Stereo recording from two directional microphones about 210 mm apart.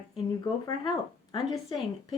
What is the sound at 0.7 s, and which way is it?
Speech, 20° left (ahead or behind).